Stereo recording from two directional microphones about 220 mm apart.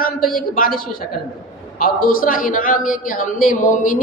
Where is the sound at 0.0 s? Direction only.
40° left (ahead or behind).